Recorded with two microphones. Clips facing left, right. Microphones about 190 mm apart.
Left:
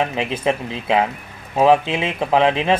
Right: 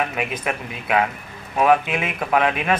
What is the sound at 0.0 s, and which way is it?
Speech, 25° left (ahead or behind).